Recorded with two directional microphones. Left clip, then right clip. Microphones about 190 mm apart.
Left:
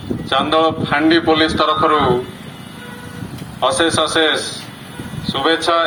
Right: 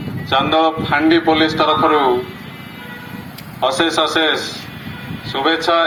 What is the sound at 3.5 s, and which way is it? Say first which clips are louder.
A man's voice: even; 10° left (ahead or behind).